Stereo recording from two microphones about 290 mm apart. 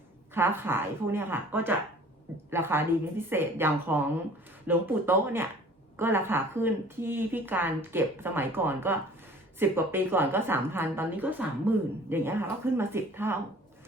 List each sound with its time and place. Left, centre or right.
0.3 s a woman's voice: centre